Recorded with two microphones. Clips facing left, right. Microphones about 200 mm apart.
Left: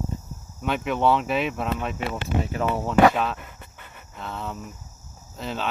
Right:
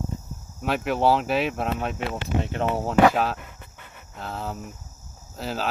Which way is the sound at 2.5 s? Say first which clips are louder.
Even; 30° right (ahead or behind).